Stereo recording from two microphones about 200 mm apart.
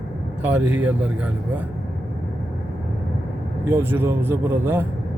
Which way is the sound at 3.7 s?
10° right (ahead or behind).